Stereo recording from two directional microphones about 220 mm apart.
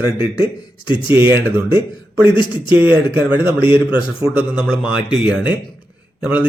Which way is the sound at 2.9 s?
10° right (ahead or behind).